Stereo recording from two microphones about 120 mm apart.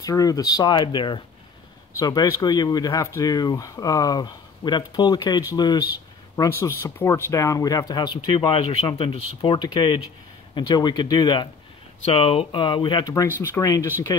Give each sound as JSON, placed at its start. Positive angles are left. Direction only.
{"t": 0.0, "sound": "speech", "side_deg": 30}
{"t": 12.0, "sound": "speech", "side_deg": 50}